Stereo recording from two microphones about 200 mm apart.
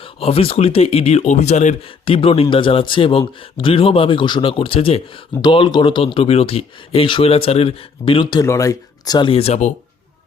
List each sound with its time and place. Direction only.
0.0 s speech: 30° left (ahead or behind)